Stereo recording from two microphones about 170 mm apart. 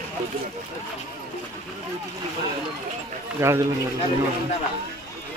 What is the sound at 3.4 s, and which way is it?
Speech, 15° right (ahead or behind).